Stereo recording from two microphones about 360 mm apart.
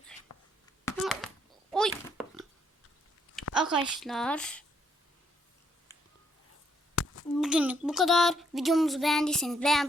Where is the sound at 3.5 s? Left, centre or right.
Centre.